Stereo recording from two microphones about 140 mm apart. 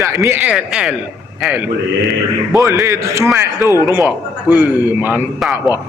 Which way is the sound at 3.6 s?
25° left (ahead or behind).